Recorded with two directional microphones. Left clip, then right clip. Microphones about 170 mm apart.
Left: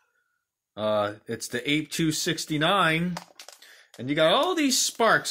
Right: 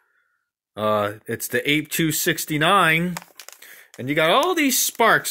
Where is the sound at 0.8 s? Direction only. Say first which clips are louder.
Right 4 dB; 55° right (ahead or behind).